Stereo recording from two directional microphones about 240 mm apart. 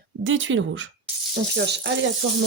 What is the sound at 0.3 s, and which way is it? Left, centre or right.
Speech, right.